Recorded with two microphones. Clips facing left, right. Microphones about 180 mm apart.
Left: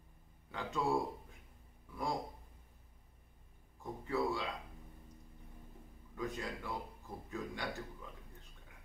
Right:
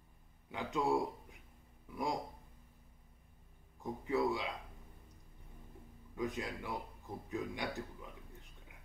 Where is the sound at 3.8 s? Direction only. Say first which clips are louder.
Right 2 dB; 20° right (ahead or behind).